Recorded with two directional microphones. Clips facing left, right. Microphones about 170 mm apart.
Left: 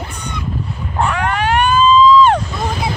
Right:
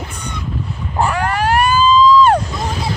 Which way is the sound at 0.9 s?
Centre (ahead or behind).